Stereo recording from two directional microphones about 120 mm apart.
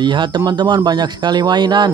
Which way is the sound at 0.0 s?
40° right (ahead or behind).